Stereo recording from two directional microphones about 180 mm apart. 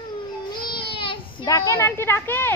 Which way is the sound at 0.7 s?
30° left (ahead or behind).